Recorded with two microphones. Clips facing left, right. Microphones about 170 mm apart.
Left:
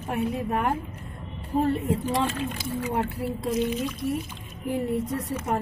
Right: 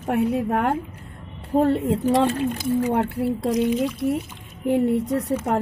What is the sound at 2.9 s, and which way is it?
Speech, 65° right (ahead or behind).